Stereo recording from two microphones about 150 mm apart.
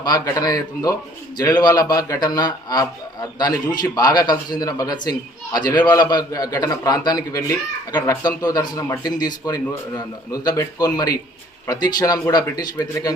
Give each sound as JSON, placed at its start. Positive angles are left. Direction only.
{"t": 0.0, "sound": "a man's voice", "side_deg": 25}